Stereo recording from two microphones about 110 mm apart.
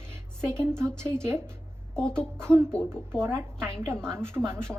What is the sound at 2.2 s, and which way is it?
A woman's voice, 25° right (ahead or behind).